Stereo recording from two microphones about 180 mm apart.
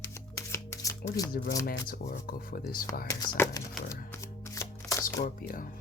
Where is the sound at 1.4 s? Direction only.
60° left (ahead or behind).